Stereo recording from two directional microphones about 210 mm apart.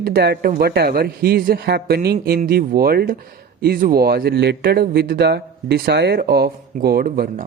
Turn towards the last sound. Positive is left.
turn(degrees=-45)  # may be behind; listen again after turning